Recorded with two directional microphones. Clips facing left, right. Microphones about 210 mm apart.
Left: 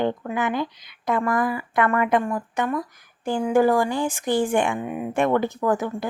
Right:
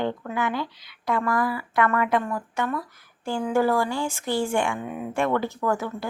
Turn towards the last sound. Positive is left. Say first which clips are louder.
# left 3 dB
turn(degrees=15)  # may be behind; listen again after turning